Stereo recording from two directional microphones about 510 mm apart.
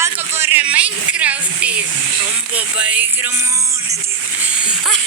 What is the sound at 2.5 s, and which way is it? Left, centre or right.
Speech, centre.